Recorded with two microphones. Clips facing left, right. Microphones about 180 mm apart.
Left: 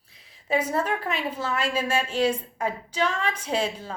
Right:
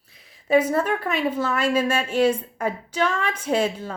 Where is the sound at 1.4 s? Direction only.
50° right (ahead or behind).